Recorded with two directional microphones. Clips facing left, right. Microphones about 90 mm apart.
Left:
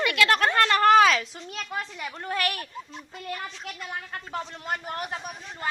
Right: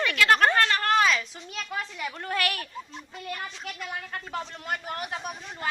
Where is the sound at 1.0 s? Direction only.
70° left (ahead or behind).